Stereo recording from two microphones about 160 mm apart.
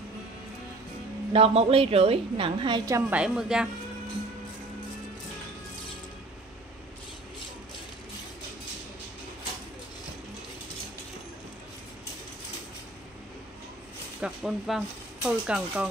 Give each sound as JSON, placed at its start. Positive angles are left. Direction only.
{"t": 1.3, "sound": "a woman's voice", "side_deg": -40}
{"t": 2.9, "sound": "a woman's voice", "side_deg": -10}
{"t": 14.2, "sound": "speech", "side_deg": -5}